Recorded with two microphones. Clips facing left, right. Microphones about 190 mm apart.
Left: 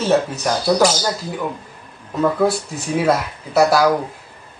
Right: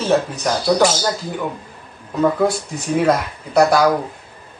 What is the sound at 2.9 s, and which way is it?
Speech, 5° left (ahead or behind).